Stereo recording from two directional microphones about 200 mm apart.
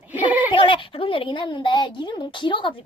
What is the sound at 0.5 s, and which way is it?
Speech, 25° left (ahead or behind).